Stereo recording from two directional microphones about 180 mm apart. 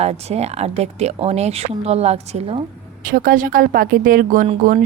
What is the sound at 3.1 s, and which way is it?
Speech, 50° right (ahead or behind).